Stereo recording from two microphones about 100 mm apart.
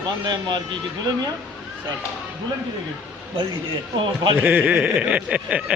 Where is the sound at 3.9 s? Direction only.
55° right (ahead or behind).